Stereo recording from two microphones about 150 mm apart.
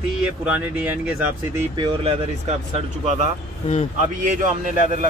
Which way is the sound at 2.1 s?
45° right (ahead or behind).